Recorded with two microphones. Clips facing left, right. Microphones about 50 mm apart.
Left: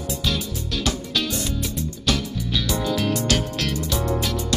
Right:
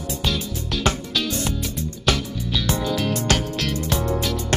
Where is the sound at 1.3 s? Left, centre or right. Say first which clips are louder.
Right 1 dB; right.